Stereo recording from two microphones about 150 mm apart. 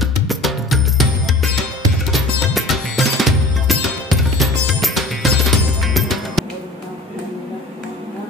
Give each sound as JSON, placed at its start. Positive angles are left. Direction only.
{"t": 0.0, "sound": "music", "side_deg": 0}